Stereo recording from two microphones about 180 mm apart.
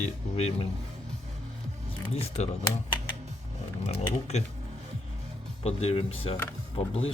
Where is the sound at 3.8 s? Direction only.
35° left (ahead or behind).